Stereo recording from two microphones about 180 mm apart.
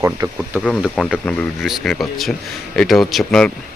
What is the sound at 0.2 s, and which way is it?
Speech, 20° right (ahead or behind).